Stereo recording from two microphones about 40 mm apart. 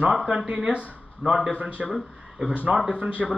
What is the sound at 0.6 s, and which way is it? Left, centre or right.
Speech, right.